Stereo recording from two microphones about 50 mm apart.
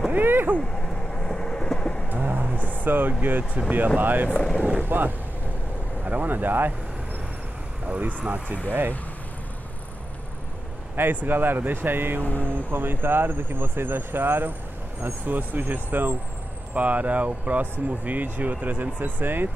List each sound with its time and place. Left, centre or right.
0.1 s vehicle: right
1.1 s train: centre
2.1 s a sound: right
2.7 s speech: right
4.4 s speech: centre
4.8 s speech: right
7.9 s speech: right
8.6 s speech: right
11.0 s speech: right
12.2 s speech: left
12.7 s speech: right
16.7 s speech: right